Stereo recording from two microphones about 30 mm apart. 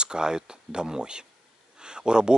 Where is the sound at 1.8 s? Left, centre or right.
Right.